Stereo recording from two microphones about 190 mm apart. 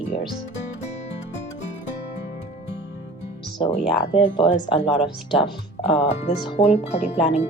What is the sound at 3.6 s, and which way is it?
Speech, 30° left (ahead or behind).